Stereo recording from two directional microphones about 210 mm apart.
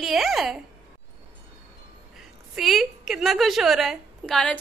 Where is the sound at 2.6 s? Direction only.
Centre (ahead or behind).